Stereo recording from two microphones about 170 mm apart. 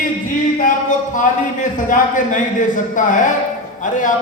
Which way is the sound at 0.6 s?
50° left (ahead or behind).